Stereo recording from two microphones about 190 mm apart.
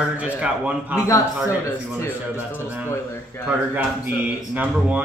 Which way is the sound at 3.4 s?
10° right (ahead or behind).